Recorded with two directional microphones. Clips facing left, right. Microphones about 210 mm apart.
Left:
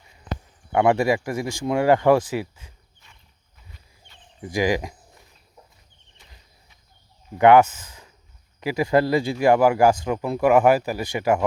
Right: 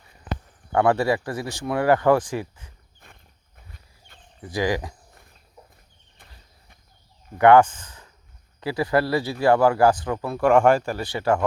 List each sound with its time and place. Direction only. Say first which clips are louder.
0.7 s speech: left 1 dB; 15° left (ahead or behind)
3.0 s horse: right 9 dB; 55° right (ahead or behind)
4.4 s speech: left 2 dB; 15° left (ahead or behind)
6.2 s a sound: right 1 dB; 55° right (ahead or behind)
7.3 s speech: even; 10° left (ahead or behind)